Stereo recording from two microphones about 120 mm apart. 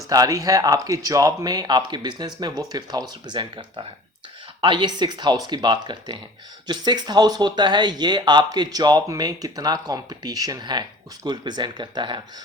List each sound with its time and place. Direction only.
0.1 s speech: 30° right (ahead or behind)